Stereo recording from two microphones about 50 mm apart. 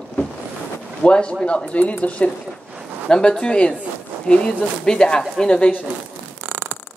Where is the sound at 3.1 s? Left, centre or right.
Centre.